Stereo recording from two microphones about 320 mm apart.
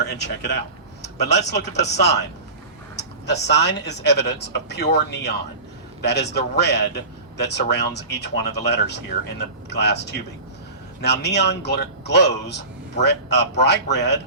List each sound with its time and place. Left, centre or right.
0.1 s speech: left
3.4 s speech: left